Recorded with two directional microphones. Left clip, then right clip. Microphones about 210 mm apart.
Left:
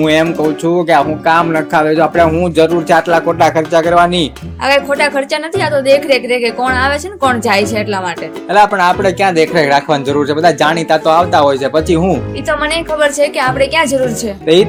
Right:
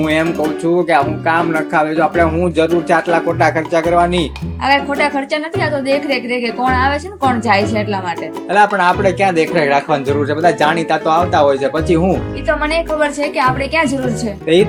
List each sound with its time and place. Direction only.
0.0 s speech: 40° left (ahead or behind)
8.5 s speech: 35° left (ahead or behind)
12.5 s speech: 50° left (ahead or behind)